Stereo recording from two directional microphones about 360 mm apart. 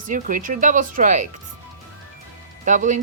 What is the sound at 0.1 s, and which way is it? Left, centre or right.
A woman's voice, right.